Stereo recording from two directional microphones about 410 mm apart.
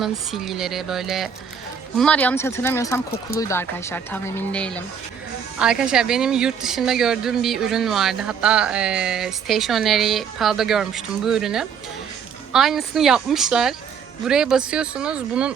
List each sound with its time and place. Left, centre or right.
0.0 s speech: centre